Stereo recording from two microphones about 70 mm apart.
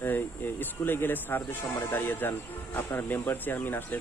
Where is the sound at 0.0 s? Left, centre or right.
Left.